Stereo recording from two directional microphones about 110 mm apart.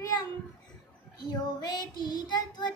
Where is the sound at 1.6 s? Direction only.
40° left (ahead or behind).